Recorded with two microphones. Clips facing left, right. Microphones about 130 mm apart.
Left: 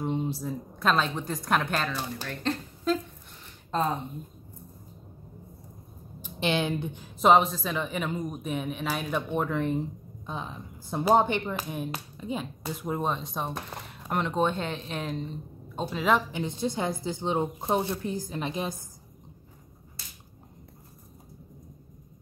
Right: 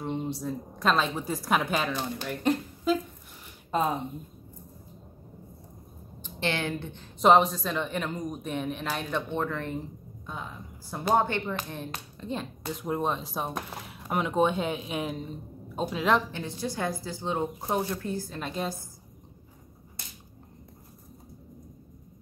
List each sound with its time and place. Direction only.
0.0 s speech: centre (ahead or behind)
2.2 s a sound: 10° right (ahead or behind)
3.7 s speech: 10° right (ahead or behind)
6.2 s speech: 15° left (ahead or behind)
7.2 s speech: centre (ahead or behind)
16.3 s a woman's voice: 15° left (ahead or behind)